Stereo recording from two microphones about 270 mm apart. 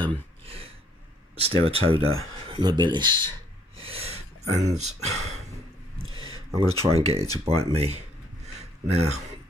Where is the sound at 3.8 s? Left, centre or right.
Right.